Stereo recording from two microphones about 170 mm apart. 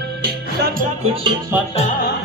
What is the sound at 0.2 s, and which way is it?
Music, 65° right (ahead or behind).